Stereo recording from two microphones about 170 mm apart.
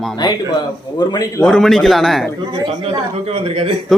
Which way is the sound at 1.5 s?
5° left (ahead or behind).